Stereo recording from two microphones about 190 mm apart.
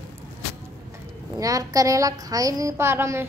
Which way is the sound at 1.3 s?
20° right (ahead or behind).